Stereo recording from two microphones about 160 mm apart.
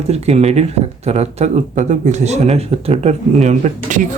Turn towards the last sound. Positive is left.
turn(degrees=-50)  # may be behind; listen again after turning